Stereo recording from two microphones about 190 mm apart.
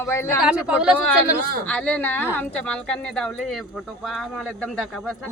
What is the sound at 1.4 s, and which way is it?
Speech, 50° right (ahead or behind).